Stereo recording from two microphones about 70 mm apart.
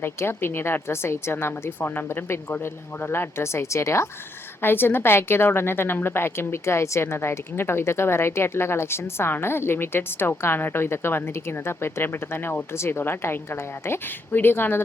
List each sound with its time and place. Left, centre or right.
0.0 s a woman's voice: left